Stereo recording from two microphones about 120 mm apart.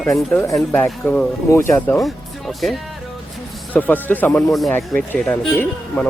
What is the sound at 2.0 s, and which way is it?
Speech, centre (ahead or behind).